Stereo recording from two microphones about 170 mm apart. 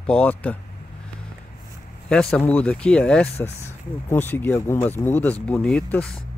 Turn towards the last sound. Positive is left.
turn(degrees=5)  # may be behind; listen again after turning